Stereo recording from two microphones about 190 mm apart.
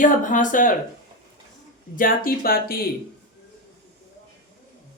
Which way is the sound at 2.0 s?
50° left (ahead or behind).